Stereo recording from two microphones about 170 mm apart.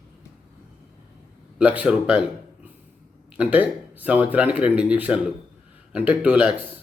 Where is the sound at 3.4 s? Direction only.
10° right (ahead or behind).